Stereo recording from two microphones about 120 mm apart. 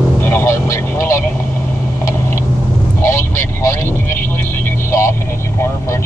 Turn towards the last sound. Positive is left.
turn(degrees=25)  # may be behind; listen again after turning